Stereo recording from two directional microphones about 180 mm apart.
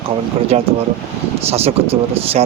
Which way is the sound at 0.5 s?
35° right (ahead or behind).